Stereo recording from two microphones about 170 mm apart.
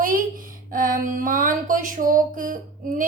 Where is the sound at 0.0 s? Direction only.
55° right (ahead or behind).